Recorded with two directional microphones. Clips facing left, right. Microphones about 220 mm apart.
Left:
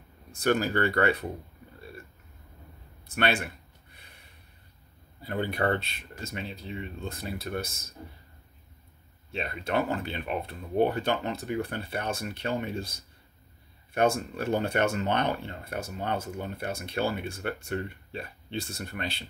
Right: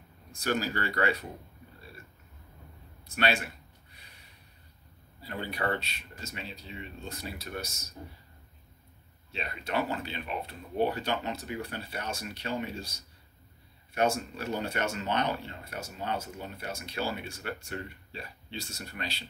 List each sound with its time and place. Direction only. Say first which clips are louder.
0.4 s speech: left 6 dB; 55° left (ahead or behind)
5.2 s speech: left 5 dB; 50° left (ahead or behind)
9.3 s speech: left 4 dB; 50° left (ahead or behind)